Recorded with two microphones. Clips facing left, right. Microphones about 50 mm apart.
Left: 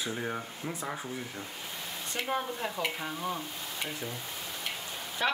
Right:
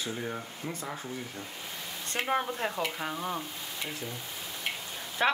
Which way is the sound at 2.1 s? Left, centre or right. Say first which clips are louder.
Right 3 dB; right.